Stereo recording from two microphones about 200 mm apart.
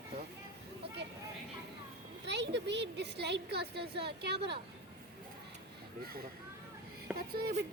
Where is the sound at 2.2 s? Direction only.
60° right (ahead or behind).